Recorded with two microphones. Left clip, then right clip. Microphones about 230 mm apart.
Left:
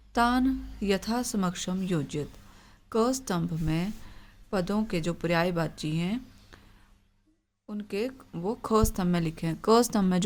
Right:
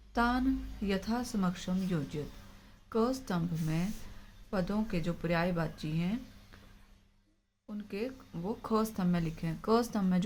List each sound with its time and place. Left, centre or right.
0.1 s speech: left
7.7 s speech: left